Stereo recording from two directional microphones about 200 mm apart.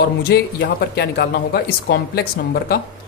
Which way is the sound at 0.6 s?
55° left (ahead or behind).